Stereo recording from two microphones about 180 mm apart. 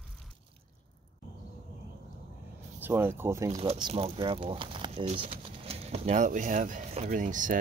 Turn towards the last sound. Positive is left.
turn(degrees=-45)  # may be behind; listen again after turning